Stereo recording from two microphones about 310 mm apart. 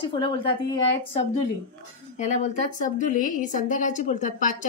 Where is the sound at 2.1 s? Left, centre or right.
Left.